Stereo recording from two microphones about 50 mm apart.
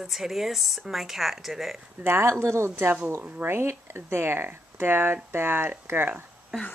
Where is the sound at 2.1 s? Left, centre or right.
Right.